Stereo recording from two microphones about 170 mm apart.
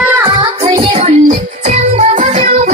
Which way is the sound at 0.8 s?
40° right (ahead or behind).